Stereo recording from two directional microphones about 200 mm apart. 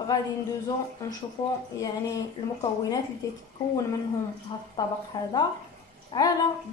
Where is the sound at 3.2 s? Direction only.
15° left (ahead or behind).